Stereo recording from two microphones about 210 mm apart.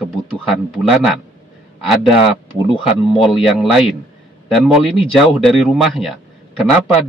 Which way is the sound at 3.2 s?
Centre (ahead or behind).